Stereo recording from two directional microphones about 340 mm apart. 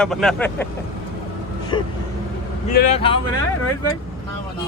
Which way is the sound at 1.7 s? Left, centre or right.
Centre.